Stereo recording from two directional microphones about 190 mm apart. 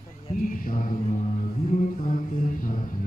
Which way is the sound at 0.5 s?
45° left (ahead or behind).